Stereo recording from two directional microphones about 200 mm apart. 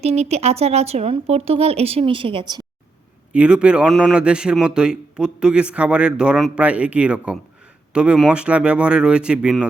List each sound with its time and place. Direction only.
0.0 s speech: 30° right (ahead or behind)
3.3 s a man's voice: 5° right (ahead or behind)